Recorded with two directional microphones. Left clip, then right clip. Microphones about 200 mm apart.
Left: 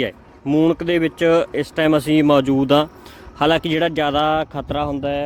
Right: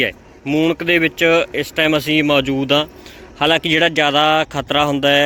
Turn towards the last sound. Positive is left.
turn(degrees=-5)  # may be behind; listen again after turning